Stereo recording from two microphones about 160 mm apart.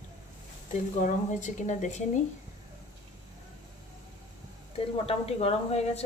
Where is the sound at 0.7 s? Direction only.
50° left (ahead or behind).